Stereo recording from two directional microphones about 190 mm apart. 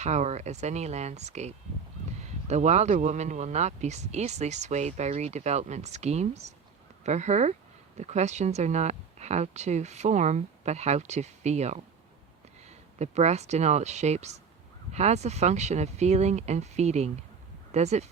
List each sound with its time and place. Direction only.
0.0 s speech: 35° right (ahead or behind)